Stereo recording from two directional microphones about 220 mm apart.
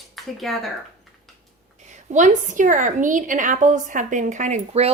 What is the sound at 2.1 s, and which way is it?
A woman's voice, 35° right (ahead or behind).